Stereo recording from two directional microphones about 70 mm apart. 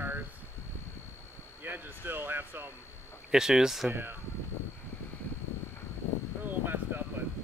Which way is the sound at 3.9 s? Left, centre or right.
Right.